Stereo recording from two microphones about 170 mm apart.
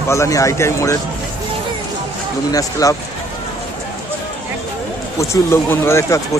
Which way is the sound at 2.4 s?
20° left (ahead or behind).